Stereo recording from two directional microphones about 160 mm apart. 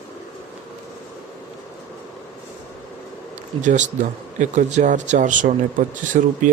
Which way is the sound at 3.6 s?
50° right (ahead or behind).